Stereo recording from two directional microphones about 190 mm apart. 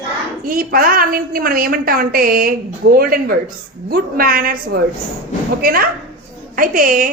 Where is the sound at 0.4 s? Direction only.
50° right (ahead or behind).